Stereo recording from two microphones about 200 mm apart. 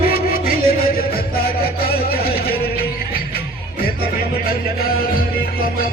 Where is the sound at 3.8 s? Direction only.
50° left (ahead or behind).